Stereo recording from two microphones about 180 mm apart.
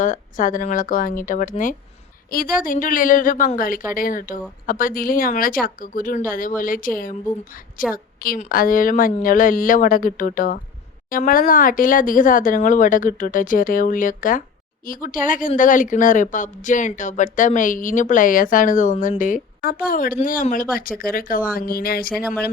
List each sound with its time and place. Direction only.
0.0 s speech: 45° left (ahead or behind)
22.1 s speech: centre (ahead or behind)